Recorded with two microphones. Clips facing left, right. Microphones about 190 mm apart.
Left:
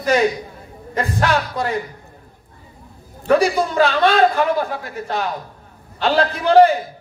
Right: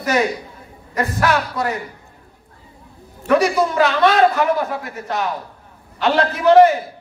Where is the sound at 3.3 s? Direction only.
30° left (ahead or behind).